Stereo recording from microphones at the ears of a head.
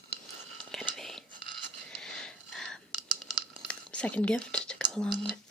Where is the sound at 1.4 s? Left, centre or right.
Right.